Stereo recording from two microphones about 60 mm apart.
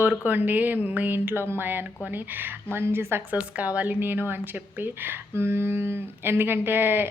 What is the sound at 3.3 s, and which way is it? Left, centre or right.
A woman's voice, right.